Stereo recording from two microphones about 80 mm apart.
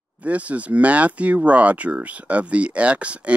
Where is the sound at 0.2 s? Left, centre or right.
Centre.